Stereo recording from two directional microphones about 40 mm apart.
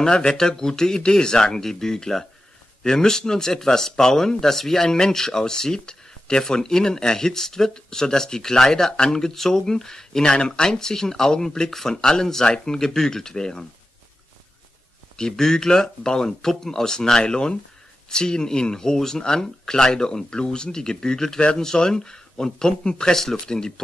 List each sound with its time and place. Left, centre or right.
0.0 s speech: centre
15.1 s speech: centre
21.4 s speech: left